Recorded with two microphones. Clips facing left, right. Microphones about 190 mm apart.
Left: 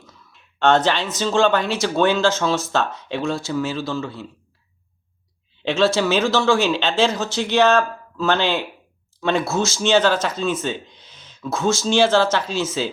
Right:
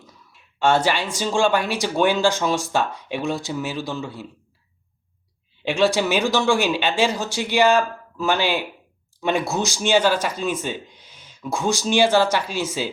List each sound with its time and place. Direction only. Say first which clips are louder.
0.0 s speech: even; 10° right (ahead or behind)
5.6 s speech: left 1 dB; 15° right (ahead or behind)